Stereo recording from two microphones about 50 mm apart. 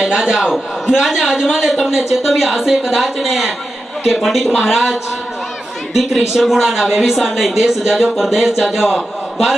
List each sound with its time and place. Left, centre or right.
0.1 s a man's voice: centre
5.9 s a man's voice: centre